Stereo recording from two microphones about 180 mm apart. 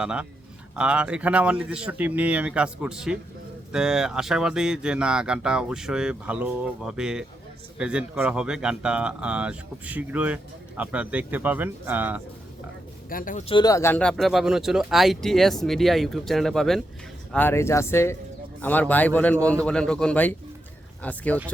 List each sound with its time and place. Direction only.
0.0 s speech: 5° right (ahead or behind)
13.1 s speech: 50° left (ahead or behind)
13.5 s speech: 20° left (ahead or behind); by 16.8 s centre (ahead or behind)
17.3 s a man's voice: 15° left (ahead or behind)